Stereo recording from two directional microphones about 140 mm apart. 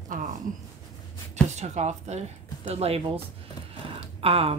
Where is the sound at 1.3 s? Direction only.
55° right (ahead or behind).